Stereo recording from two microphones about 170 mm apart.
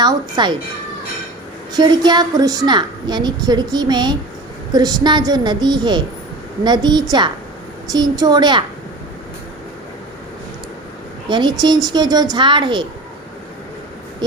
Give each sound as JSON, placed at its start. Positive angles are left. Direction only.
{"t": 0.0, "sound": "a woman's voice", "side_deg": -25}
{"t": 1.7, "sound": "a woman's voice", "side_deg": -25}
{"t": 11.3, "sound": "a woman's voice", "side_deg": -25}
{"t": 14.2, "sound": "a woman's voice", "side_deg": -25}